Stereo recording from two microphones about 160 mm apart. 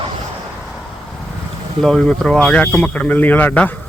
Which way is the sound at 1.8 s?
5° left (ahead or behind).